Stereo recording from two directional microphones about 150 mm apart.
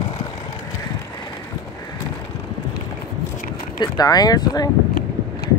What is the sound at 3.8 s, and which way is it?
Speech, 25° left (ahead or behind).